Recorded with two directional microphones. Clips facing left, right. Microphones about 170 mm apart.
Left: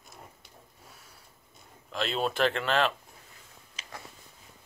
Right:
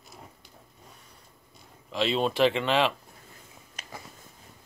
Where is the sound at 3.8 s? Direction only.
55° right (ahead or behind).